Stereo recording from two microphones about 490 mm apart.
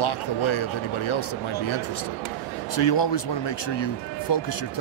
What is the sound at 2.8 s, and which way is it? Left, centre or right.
Speech, left.